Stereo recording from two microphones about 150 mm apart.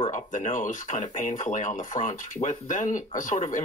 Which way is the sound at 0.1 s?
60° left (ahead or behind).